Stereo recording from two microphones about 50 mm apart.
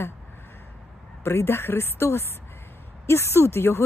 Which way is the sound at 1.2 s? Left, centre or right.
Left.